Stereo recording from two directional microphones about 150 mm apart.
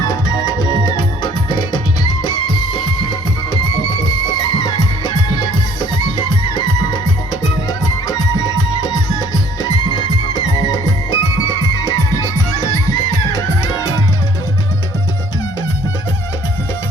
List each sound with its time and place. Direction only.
0.0 s music: 20° left (ahead or behind)